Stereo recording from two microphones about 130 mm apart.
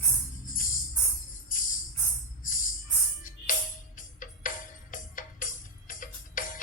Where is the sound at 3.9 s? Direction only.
90° left.